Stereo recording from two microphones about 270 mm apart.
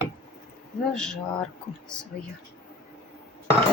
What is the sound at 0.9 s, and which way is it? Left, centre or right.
Speech, centre.